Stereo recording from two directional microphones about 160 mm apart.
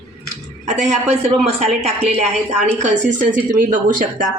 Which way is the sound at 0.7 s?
45° right (ahead or behind).